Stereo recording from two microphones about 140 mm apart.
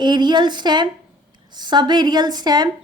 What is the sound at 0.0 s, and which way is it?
A woman's voice, 30° right (ahead or behind).